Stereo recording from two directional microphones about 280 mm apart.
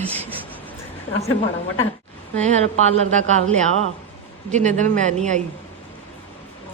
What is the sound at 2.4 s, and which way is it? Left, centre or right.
Speech, right.